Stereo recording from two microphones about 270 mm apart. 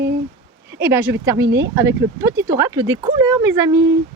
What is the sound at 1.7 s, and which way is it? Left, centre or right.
Speech, centre.